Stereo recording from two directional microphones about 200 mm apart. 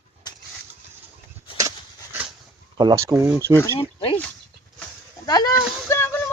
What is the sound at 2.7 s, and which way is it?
Speech, 20° right (ahead or behind).